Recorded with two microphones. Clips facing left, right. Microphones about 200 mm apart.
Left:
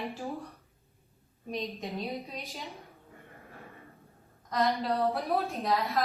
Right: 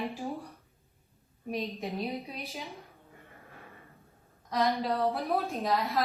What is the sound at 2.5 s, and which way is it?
Speech, centre (ahead or behind).